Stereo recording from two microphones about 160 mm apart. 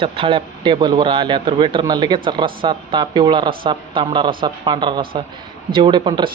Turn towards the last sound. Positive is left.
turn(degrees=-30)  # may be behind; listen again after turning